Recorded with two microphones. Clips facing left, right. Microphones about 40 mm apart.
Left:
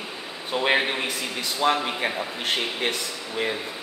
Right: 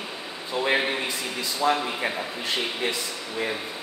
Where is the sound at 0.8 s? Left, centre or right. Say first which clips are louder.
Left 1 dB; centre.